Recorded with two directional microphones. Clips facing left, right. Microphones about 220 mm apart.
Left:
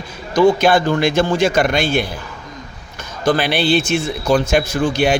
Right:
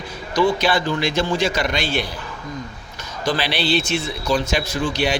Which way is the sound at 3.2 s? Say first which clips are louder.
Left 6 dB; 50° left (ahead or behind).